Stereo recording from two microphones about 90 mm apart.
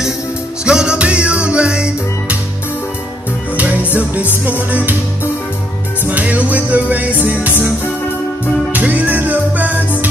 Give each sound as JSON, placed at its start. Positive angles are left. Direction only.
{"t": 0.7, "sound": "music", "side_deg": -10}
{"t": 3.5, "sound": "music", "side_deg": -15}
{"t": 8.7, "sound": "music", "side_deg": -20}